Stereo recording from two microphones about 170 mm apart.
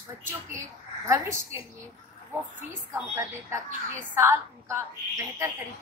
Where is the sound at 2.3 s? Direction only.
10° right (ahead or behind).